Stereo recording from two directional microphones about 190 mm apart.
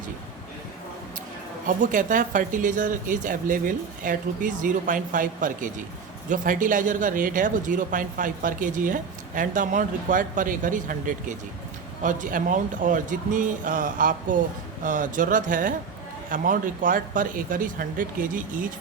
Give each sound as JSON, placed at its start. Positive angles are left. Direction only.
{"t": 1.6, "sound": "speech", "side_deg": -45}